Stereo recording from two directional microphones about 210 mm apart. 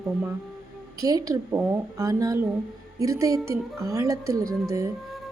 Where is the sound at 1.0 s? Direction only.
15° right (ahead or behind).